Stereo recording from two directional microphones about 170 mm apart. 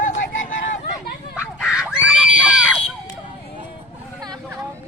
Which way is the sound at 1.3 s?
5° right (ahead or behind).